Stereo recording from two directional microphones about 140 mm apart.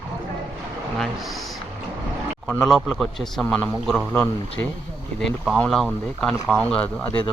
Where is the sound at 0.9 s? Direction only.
Centre (ahead or behind).